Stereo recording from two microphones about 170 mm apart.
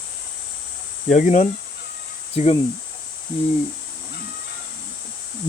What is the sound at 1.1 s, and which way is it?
Speech, 45° left (ahead or behind).